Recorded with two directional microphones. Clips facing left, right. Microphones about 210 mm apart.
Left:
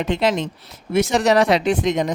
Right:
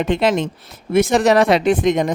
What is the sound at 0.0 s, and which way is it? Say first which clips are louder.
Speech: right 3 dB; 55° right (ahead or behind).